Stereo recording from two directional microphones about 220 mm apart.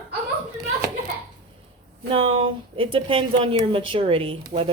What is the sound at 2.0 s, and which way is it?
Speech, 25° right (ahead or behind).